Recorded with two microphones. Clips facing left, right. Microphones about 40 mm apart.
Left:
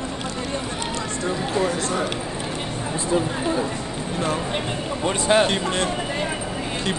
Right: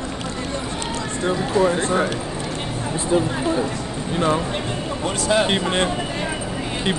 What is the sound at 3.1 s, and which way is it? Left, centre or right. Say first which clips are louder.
Speech: right 3 dB; centre.